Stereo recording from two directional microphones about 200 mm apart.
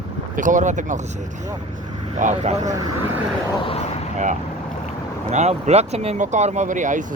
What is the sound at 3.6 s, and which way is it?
Speech, 30° left (ahead or behind).